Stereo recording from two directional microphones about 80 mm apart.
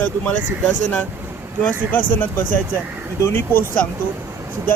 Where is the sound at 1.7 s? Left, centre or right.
Left.